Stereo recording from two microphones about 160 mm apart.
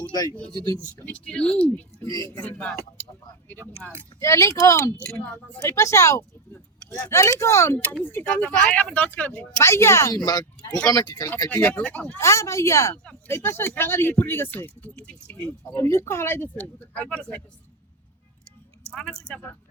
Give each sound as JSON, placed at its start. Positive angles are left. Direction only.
{"t": 1.0, "sound": "speech", "side_deg": 10}
{"t": 4.2, "sound": "speech", "side_deg": 20}
{"t": 4.9, "sound": "speech", "side_deg": 10}
{"t": 11.4, "sound": "speech", "side_deg": 10}
{"t": 18.9, "sound": "speech", "side_deg": 5}